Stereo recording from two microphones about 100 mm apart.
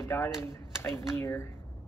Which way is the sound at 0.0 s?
25° left (ahead or behind).